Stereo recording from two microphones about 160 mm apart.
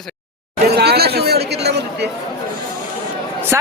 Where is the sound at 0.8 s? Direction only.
85° right.